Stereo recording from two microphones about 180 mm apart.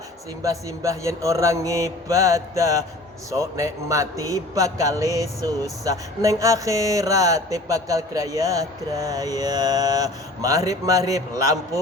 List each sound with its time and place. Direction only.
0.4 s mantra: 20° right (ahead or behind)
3.2 s a man's voice: 15° right (ahead or behind)